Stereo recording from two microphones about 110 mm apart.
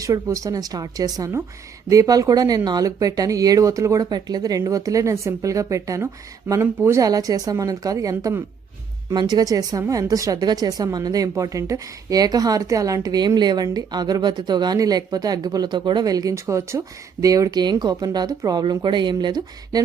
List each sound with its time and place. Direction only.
0.0 s speech: 30° right (ahead or behind)